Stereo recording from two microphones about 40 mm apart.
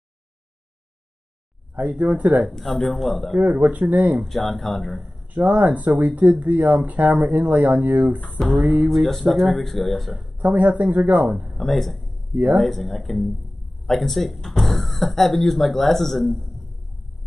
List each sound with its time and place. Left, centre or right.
1.8 s speech: right
2.8 s speech: centre
3.3 s speech: right
4.2 s speech: centre
5.3 s speech: right
8.5 s speech: right
8.8 s speech: centre
10.4 s speech: right
11.5 s speech: centre